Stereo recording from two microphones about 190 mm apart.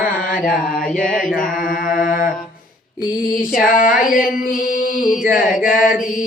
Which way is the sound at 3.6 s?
45° left (ahead or behind).